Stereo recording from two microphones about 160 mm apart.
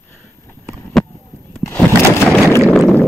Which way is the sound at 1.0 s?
5° left (ahead or behind).